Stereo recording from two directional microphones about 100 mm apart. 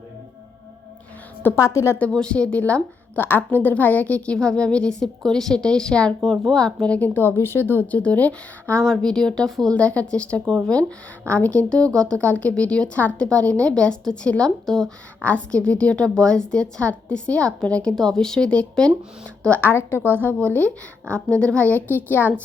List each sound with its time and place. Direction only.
1.4 s a woman's voice: 25° left (ahead or behind)
2.0 s a woman's voice: 10° left (ahead or behind)